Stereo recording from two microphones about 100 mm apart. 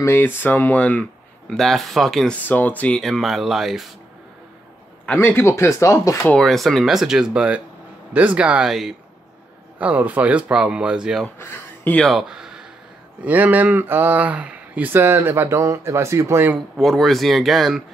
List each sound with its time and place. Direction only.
0.0 s speech: 20° left (ahead or behind)
1.5 s speech: centre (ahead or behind)
2.3 s speech: 15° left (ahead or behind)
3.0 s speech: centre (ahead or behind)
5.0 s speech: 20° left (ahead or behind)
6.3 s a man's voice: 5° left (ahead or behind)
9.8 s a man's voice: 15° right (ahead or behind)
11.3 s speech: 25° left (ahead or behind)
12.0 s speech: centre (ahead or behind)
13.2 s speech: 15° right (ahead or behind)
16.7 s speech: centre (ahead or behind)